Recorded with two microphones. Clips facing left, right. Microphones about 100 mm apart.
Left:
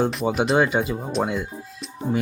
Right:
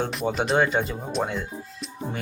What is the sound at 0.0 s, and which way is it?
Speech, centre (ahead or behind).